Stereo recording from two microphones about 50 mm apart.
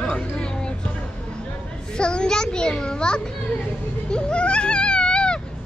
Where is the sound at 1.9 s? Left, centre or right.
Centre.